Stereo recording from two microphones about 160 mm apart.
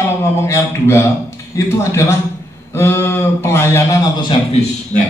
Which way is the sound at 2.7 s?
15° left (ahead or behind).